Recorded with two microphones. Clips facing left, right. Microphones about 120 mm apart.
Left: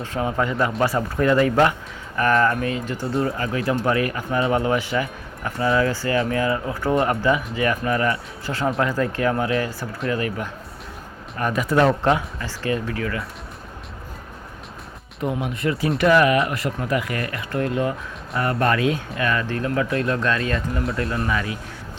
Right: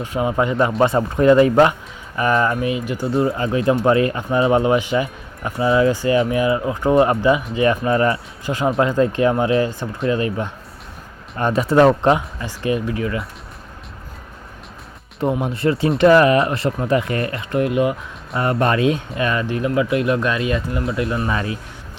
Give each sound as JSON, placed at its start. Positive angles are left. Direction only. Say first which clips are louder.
{"t": 0.0, "sound": "speech", "louder": "right 4 dB", "side_deg": -15}
{"t": 8.4, "sound": "speech", "louder": "right 4 dB", "side_deg": -15}
{"t": 15.2, "sound": "speech", "louder": "right 5 dB", "side_deg": -30}
{"t": 21.2, "sound": "speech", "louder": "right 2 dB", "side_deg": -30}